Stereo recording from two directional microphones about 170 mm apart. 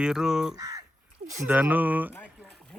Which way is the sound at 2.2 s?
Centre (ahead or behind).